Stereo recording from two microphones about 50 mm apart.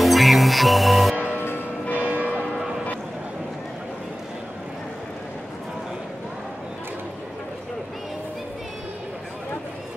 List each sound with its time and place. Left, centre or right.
0.0 s music: centre
1.3 s music: left
2.0 s church bell: right